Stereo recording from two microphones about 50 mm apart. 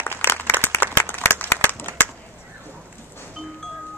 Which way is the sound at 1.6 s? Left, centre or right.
Left.